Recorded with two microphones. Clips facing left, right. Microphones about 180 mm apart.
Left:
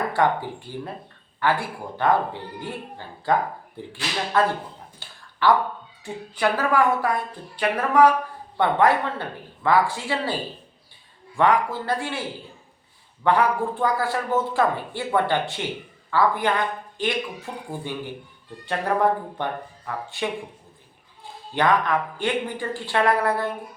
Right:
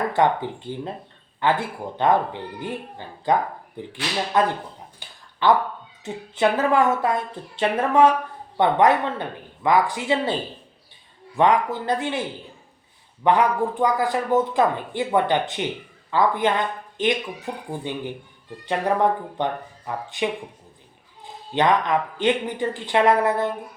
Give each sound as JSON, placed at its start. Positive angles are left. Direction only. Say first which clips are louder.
{"t": 0.1, "sound": "speech", "louder": "right 2 dB", "side_deg": -20}
{"t": 4.9, "sound": "a sound", "louder": "left 1 dB", "side_deg": -20}
{"t": 6.3, "sound": "speech", "louder": "right 3 dB", "side_deg": -25}
{"t": 13.2, "sound": "speech", "louder": "right 1 dB", "side_deg": -15}
{"t": 19.4, "sound": "speech", "louder": "right 3 dB", "side_deg": -20}
{"t": 21.5, "sound": "speech", "louder": "right 1 dB", "side_deg": -20}